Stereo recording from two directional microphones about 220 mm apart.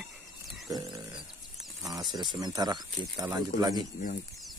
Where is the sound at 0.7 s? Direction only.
20° right (ahead or behind).